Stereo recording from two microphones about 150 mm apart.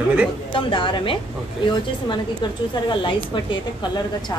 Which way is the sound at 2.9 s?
30° left (ahead or behind).